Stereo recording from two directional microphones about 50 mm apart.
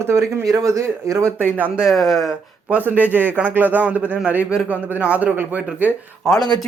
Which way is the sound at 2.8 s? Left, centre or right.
Right.